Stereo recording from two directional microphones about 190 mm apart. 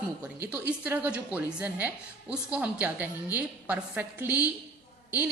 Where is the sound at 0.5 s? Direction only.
10° right (ahead or behind).